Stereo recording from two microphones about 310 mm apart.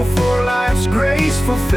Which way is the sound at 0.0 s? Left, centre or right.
Centre.